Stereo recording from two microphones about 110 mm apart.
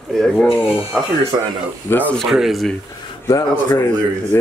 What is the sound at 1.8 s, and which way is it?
Speech, 15° left (ahead or behind).